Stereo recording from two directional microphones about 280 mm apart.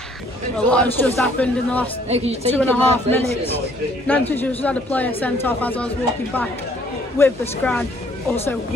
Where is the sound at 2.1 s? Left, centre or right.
Right.